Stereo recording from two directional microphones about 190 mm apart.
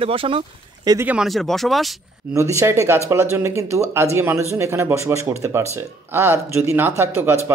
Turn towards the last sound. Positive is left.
turn(degrees=-15)  # may be behind; listen again after turning